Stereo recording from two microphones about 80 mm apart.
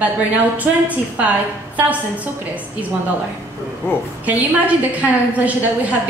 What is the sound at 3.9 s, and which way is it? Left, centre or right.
Speech, left.